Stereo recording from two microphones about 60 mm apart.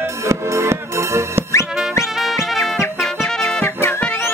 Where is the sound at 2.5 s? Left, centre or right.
Centre.